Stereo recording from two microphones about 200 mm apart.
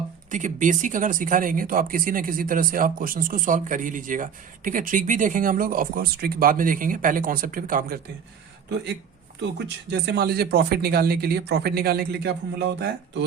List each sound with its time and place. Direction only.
0.3 s speech: 40° right (ahead or behind)
9.9 s speech: 55° right (ahead or behind)